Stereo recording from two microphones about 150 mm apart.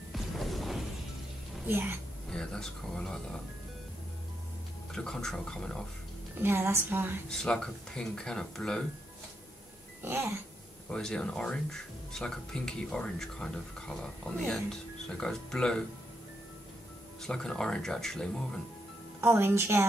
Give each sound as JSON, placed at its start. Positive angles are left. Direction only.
{"t": 0.1, "sound": "smash", "side_deg": 0}
{"t": 1.7, "sound": "a woman's voice", "side_deg": -15}
{"t": 2.2, "sound": "speech", "side_deg": 5}
{"t": 4.9, "sound": "speech", "side_deg": 5}
{"t": 6.3, "sound": "a woman's voice", "side_deg": -15}
{"t": 7.2, "sound": "speech", "side_deg": 5}
{"t": 10.0, "sound": "a woman's voice", "side_deg": -20}
{"t": 10.9, "sound": "speech", "side_deg": 5}
{"t": 17.2, "sound": "speech", "side_deg": 5}
{"t": 19.2, "sound": "a woman's voice", "side_deg": -15}